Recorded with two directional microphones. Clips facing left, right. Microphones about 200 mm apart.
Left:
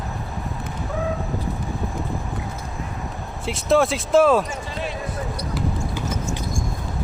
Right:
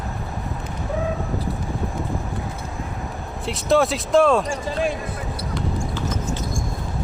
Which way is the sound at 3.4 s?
Centre (ahead or behind).